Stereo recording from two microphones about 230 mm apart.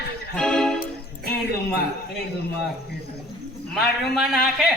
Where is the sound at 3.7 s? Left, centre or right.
Centre.